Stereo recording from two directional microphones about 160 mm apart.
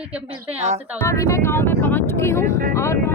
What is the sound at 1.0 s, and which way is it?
Speech, 20° left (ahead or behind).